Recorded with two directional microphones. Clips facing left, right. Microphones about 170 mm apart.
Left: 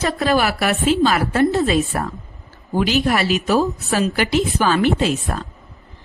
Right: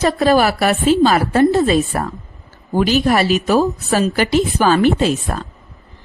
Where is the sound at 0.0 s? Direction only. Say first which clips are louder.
Right 5 dB; 35° right (ahead or behind).